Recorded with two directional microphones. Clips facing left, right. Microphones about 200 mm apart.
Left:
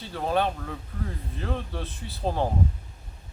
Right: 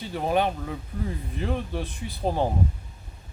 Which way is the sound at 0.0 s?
15° right (ahead or behind).